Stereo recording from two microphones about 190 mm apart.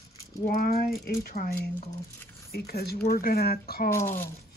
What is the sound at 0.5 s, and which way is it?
Speech, 50° left (ahead or behind).